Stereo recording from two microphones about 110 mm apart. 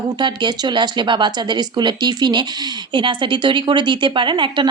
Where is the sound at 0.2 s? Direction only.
45° right (ahead or behind).